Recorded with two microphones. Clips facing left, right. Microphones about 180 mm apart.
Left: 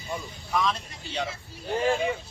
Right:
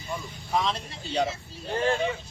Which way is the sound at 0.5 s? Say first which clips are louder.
Even; 30° right (ahead or behind).